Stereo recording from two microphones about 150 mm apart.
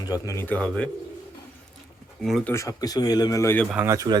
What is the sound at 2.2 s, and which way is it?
Speech, centre (ahead or behind).